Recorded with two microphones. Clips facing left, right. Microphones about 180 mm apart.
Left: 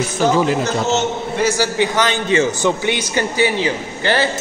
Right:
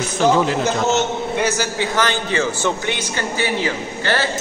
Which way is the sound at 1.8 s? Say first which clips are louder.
Left 3 dB; 20° left (ahead or behind).